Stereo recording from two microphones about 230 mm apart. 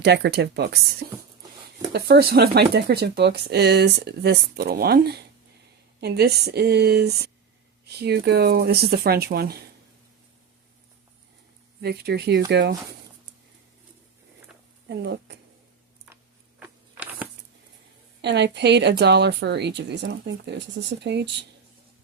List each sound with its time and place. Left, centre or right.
0.0 s speech: right
1.9 s speech: right
11.8 s speech: right
14.8 s speech: right
16.6 s a sound: centre
18.2 s speech: right